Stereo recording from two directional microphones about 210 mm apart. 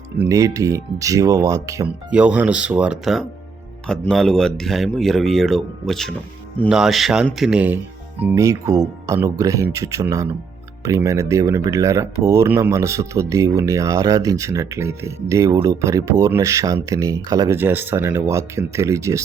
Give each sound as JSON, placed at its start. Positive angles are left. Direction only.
{"t": 0.2, "sound": "speech", "side_deg": -15}